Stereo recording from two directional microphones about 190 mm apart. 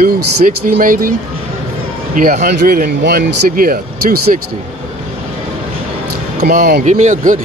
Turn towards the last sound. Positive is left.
turn(degrees=-40)  # may be behind; listen again after turning